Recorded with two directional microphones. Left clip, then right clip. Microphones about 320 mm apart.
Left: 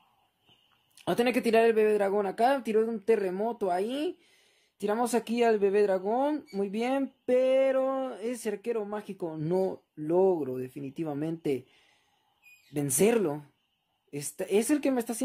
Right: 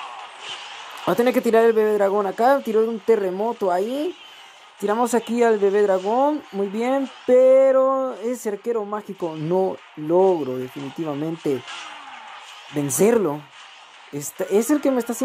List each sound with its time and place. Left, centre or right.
1.0 s speech: centre
12.7 s speech: centre